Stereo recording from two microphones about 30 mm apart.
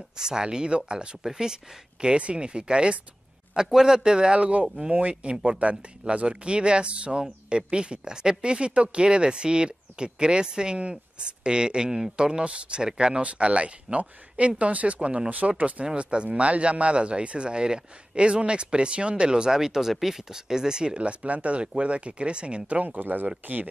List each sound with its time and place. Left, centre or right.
0.2 s speech: right
1.2 s speech: centre
3.5 s speech: right
5.6 s speech: right
6.2 s speech: right
10.8 s speech: right
12.8 s speech: right
13.2 s speech: right
16.0 s speech: right
16.3 s speech: right
19.5 s speech: centre
21.0 s speech: right
22.9 s speech: right
23.4 s speech: right